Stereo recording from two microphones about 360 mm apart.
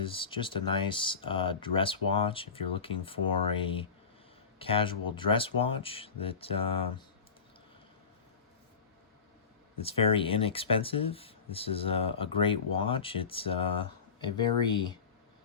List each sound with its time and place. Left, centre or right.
0.0 s speech: centre
9.8 s speech: centre